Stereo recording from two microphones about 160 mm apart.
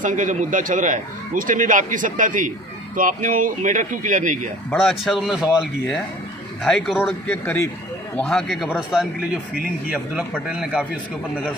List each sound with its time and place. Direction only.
0.0 s a man's voice: 50° right (ahead or behind)
4.7 s speech: centre (ahead or behind)
7.3 s speech: 15° left (ahead or behind)
8.1 s speech: 5° left (ahead or behind)
10.5 s a man's voice: 5° right (ahead or behind)